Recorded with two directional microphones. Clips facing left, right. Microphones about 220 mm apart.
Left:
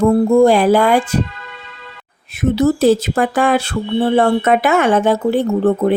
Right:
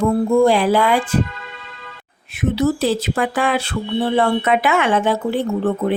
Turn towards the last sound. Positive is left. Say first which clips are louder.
# left 5 dB
turn(degrees=45)  # may be behind; listen again after turning